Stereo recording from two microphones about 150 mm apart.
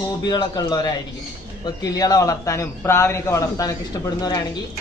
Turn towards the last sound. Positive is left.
turn(degrees=25)  # may be behind; listen again after turning